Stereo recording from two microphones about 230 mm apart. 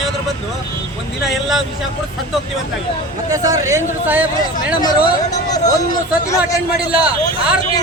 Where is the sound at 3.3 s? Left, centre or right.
Centre.